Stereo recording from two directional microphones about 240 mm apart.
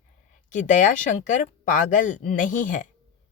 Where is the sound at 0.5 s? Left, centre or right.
Left.